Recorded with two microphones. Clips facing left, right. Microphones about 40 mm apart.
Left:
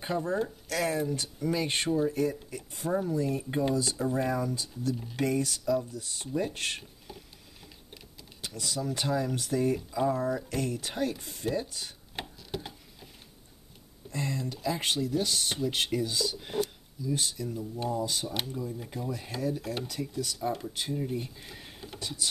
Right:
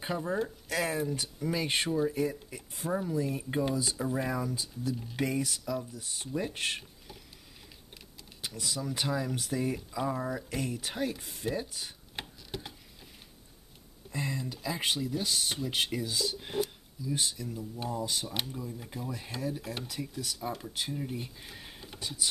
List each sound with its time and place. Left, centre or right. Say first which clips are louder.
0.4 s speech: left 1 dB; centre
6.8 s a sound: left 3 dB; centre
8.4 s speech: left 2 dB; centre
14.1 s speech: left 2 dB; centre